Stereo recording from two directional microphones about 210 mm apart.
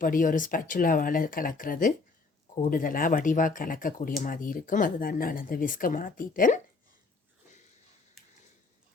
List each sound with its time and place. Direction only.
0.0 s speech: 40° left (ahead or behind)